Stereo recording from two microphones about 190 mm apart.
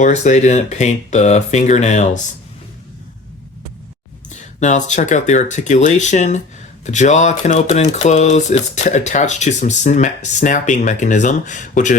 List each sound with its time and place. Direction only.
0.0 s speech: 35° left (ahead or behind)
4.3 s speech: 40° left (ahead or behind)